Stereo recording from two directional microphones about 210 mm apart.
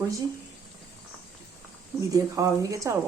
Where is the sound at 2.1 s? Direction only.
15° right (ahead or behind).